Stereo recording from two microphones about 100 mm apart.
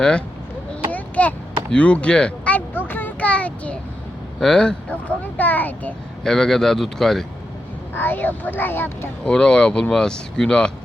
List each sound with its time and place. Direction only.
0.0 s speech: 10° left (ahead or behind)
0.9 s a sound: 15° left (ahead or behind)
4.4 s speech: 5° left (ahead or behind)
6.2 s speech: 5° left (ahead or behind)
7.9 s speech: 20° left (ahead or behind)
9.2 s speech: 10° left (ahead or behind)